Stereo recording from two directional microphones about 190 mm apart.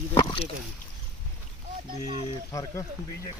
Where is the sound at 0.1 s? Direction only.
20° left (ahead or behind).